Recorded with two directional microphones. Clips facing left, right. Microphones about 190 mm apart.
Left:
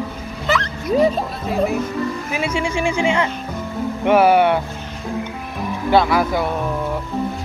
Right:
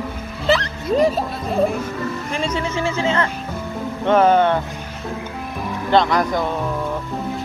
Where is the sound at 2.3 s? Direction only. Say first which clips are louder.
Right 1 dB; 10° left (ahead or behind).